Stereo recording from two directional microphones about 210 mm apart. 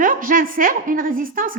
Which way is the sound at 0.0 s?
40° right (ahead or behind).